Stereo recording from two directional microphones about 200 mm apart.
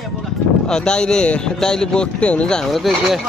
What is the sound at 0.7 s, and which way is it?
A man's voice, 5° left (ahead or behind).